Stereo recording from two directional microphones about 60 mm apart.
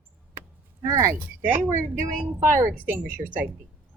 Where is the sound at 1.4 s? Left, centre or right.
Right.